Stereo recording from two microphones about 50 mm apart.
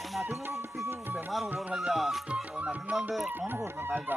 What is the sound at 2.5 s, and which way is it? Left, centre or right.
Music, right.